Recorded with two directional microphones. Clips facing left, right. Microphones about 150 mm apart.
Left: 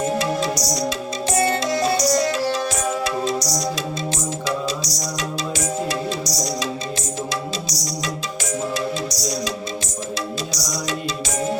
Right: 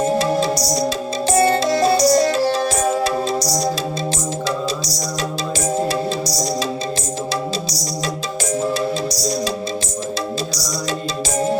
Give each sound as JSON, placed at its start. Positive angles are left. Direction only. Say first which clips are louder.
{"t": 0.0, "sound": "music", "louder": "right 4 dB", "side_deg": -30}
{"t": 5.9, "sound": "music", "louder": "right 4 dB", "side_deg": -30}